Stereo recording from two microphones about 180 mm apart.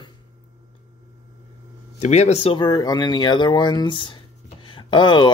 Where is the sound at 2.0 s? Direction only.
40° left (ahead or behind).